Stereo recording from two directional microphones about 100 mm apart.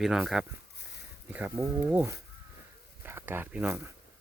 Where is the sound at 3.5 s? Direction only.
15° right (ahead or behind).